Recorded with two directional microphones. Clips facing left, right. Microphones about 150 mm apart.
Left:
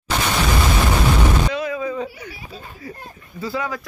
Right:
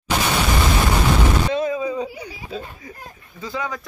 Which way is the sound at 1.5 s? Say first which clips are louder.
Right 3 dB; 25° right (ahead or behind).